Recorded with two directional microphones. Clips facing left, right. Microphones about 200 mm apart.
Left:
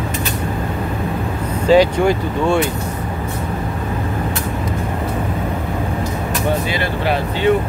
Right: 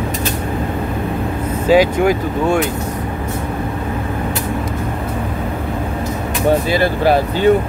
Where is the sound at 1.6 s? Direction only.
10° right (ahead or behind).